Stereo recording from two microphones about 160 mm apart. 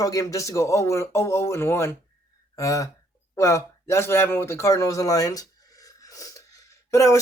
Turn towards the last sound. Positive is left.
turn(degrees=20)  # may be behind; listen again after turning